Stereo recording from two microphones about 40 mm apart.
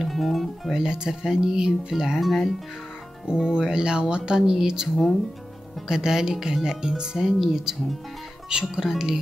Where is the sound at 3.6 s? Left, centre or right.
Right.